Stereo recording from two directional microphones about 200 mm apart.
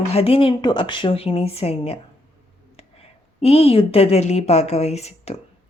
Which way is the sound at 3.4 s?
30° left (ahead or behind).